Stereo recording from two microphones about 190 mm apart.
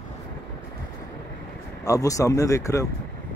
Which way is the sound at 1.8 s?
15° left (ahead or behind).